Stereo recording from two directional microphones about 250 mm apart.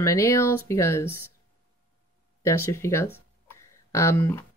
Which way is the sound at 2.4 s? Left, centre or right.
Centre.